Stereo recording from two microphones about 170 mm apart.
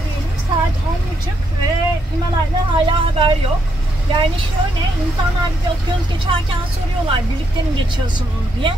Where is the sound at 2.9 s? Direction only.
30° right (ahead or behind).